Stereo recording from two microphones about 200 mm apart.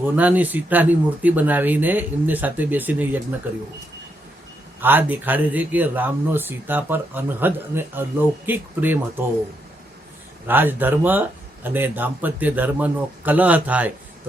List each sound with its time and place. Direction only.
0.0 s speech: 10° right (ahead or behind)
4.8 s speech: 10° right (ahead or behind)
10.4 s speech: 10° right (ahead or behind)